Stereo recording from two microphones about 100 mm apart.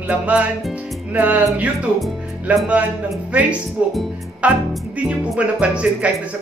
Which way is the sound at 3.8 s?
15° right (ahead or behind).